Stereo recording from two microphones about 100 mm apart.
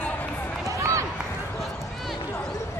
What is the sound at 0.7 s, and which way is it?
Run, 30° right (ahead or behind).